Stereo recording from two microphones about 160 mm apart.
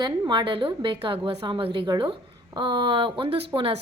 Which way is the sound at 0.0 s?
25° right (ahead or behind).